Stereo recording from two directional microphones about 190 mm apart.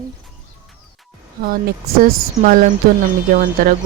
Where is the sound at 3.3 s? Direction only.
45° right (ahead or behind).